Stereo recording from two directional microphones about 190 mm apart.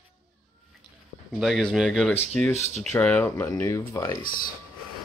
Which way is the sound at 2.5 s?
35° left (ahead or behind).